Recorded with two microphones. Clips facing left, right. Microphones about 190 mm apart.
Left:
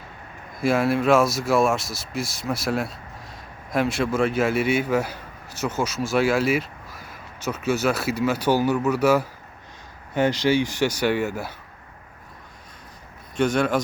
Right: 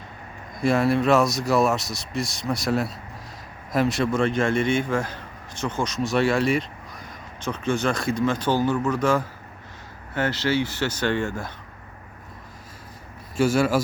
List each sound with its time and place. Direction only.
0.6 s a man's voice: centre (ahead or behind)
13.3 s a man's voice: 5° right (ahead or behind)